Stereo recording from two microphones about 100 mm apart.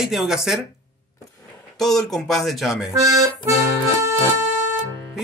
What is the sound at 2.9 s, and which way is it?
Speech, 35° right (ahead or behind).